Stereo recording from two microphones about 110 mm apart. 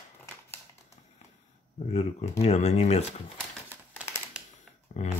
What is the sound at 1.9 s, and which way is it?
Speech, 75° left (ahead or behind).